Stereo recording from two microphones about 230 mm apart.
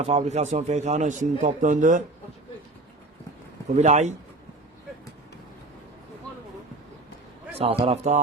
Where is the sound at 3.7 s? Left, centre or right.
Right.